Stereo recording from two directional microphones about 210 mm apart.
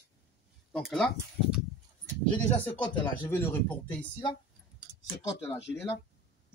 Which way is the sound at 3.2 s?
10° left (ahead or behind).